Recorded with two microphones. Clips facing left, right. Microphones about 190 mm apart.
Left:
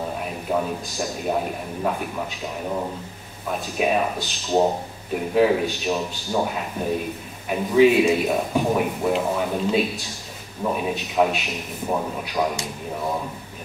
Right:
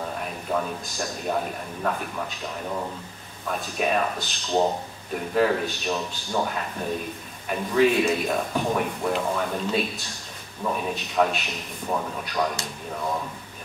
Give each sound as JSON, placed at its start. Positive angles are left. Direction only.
{"t": 0.5, "sound": "a man's voice", "side_deg": 5}
{"t": 3.4, "sound": "a man's voice", "side_deg": 5}